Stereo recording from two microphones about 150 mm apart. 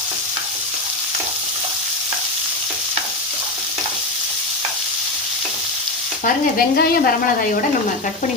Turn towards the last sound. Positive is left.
turn(degrees=85)